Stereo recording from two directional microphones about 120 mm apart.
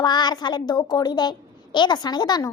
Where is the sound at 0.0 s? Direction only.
35° left (ahead or behind).